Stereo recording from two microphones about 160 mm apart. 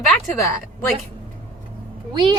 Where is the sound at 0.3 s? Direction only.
20° left (ahead or behind).